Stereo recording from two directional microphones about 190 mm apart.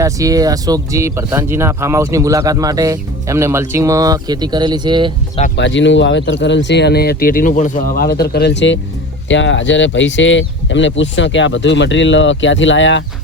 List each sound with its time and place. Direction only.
0.0 s speech: 20° right (ahead or behind)
5.5 s speech: 70° left (ahead or behind)